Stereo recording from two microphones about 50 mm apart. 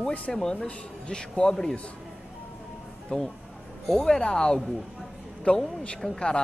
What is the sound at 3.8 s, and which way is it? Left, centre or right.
Speech, centre.